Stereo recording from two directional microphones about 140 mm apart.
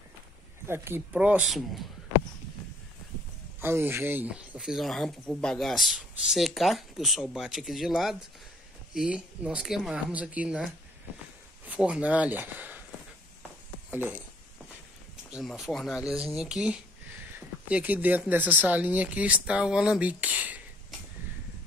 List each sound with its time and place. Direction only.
0.7 s speech: 15° right (ahead or behind)
1.1 s speech: 5° right (ahead or behind)
3.6 s speech: 15° right (ahead or behind)
13.8 s speech: 10° right (ahead or behind)
15.3 s speech: centre (ahead or behind)